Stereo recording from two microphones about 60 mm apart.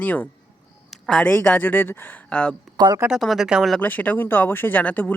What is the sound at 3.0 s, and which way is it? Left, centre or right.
Speech, centre.